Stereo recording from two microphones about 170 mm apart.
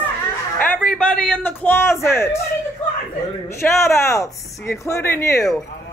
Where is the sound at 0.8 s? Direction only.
5° left (ahead or behind).